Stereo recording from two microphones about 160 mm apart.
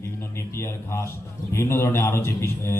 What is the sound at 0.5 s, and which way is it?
A man's voice, 15° left (ahead or behind).